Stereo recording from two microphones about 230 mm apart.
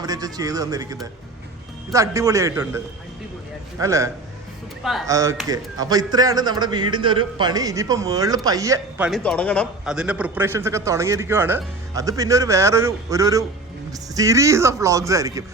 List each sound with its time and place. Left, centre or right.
0.0 s speech: centre
4.8 s speech: centre
5.0 s speech: centre
9.0 s speech: centre